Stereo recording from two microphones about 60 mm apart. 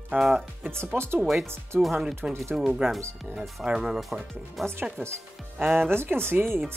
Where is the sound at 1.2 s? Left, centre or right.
Centre.